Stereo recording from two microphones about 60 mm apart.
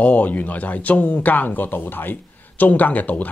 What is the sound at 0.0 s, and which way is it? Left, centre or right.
Speech, left.